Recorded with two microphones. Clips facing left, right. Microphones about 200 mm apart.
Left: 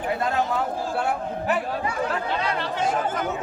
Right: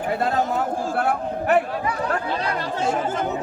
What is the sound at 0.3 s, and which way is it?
Speech, 45° right (ahead or behind).